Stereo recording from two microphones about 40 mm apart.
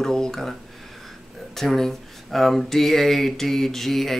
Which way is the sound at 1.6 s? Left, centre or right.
Centre.